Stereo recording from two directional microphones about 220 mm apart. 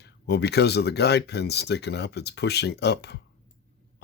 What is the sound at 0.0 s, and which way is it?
Speech, 50° left (ahead or behind).